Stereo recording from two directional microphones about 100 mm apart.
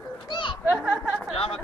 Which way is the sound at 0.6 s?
20° right (ahead or behind).